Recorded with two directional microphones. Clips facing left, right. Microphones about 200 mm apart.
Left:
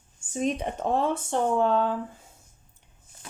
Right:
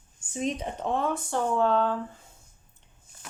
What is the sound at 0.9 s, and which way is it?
Speech, 30° left (ahead or behind).